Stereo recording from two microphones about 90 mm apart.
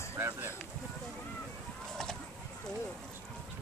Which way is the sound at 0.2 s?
25° right (ahead or behind).